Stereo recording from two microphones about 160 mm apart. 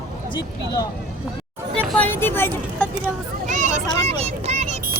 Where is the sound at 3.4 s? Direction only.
50° right (ahead or behind).